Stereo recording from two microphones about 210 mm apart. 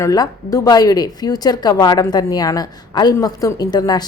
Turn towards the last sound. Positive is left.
turn(degrees=20)  # may be behind; listen again after turning